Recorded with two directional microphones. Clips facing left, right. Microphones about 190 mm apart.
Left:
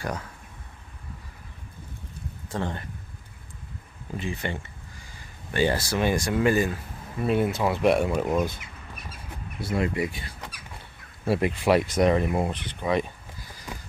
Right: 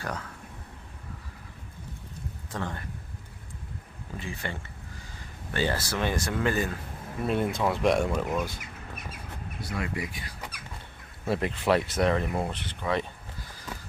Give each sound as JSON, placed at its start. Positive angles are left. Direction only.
{"t": 2.5, "sound": "speech", "side_deg": 30}
{"t": 4.2, "sound": "speech", "side_deg": 20}
{"t": 8.3, "sound": "speech", "side_deg": 20}
{"t": 9.6, "sound": "speech", "side_deg": 25}
{"t": 11.2, "sound": "speech", "side_deg": 10}